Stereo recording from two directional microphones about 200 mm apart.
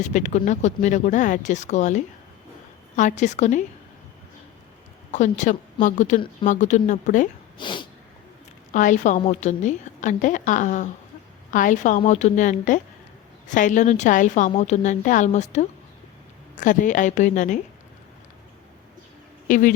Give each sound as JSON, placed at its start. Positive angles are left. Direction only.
{"t": 0.0, "sound": "a woman's voice", "side_deg": 35}
{"t": 5.1, "sound": "a woman's voice", "side_deg": 35}
{"t": 7.6, "sound": "snort", "side_deg": 25}
{"t": 8.7, "sound": "a woman's voice", "side_deg": 40}
{"t": 19.5, "sound": "a woman's voice", "side_deg": 40}